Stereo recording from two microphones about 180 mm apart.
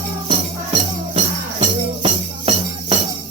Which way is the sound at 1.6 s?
35° right (ahead or behind).